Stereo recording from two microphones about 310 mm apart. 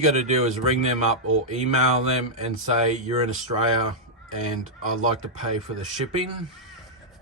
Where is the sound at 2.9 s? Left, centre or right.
Right.